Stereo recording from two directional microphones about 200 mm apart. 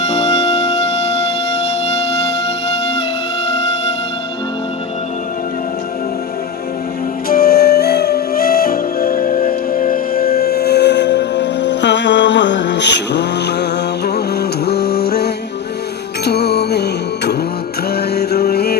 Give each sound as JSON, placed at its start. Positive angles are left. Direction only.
{"t": 0.1, "sound": "music", "side_deg": 30}
{"t": 7.3, "sound": "music", "side_deg": 50}